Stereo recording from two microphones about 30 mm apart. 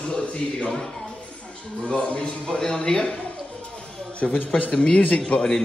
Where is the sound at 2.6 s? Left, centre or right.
Left.